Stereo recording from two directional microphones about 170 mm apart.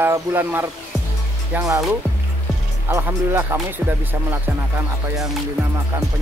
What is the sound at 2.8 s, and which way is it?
Speech, 15° right (ahead or behind).